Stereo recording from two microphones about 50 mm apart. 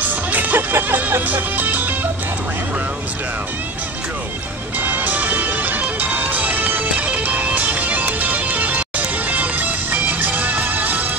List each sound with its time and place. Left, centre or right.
0.1 s music: right
4.7 s music: right
6.9 s music: right